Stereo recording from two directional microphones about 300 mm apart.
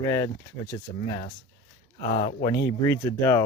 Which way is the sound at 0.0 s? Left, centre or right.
Centre.